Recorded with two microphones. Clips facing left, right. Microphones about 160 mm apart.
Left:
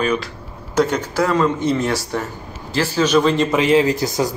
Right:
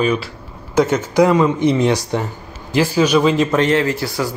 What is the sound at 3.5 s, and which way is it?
Speech, 10° left (ahead or behind).